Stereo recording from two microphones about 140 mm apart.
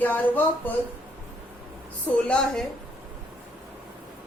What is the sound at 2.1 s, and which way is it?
Speech, 5° left (ahead or behind).